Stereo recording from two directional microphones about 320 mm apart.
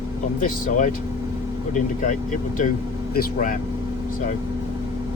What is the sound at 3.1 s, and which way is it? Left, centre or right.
Speech, left.